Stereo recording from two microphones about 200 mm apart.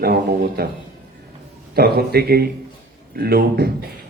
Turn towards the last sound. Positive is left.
turn(degrees=-50)  # may be behind; listen again after turning